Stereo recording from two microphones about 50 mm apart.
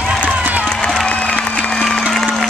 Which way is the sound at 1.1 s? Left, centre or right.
Left.